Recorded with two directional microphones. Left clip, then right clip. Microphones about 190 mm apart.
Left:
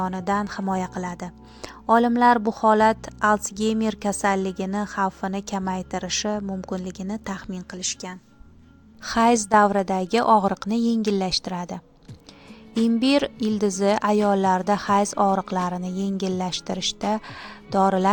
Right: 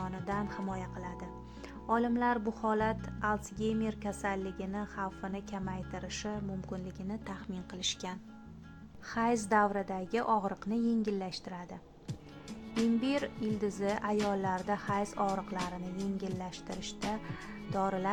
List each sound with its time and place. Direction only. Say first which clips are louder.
0.0 s speech: left 13 dB; 40° left (ahead or behind)
9.0 s speech: left 12 dB; 40° left (ahead or behind)
13.0 s speech: left 13 dB; 40° left (ahead or behind)